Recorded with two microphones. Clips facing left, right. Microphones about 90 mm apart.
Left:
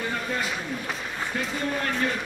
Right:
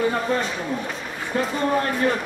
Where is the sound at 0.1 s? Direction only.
40° right (ahead or behind).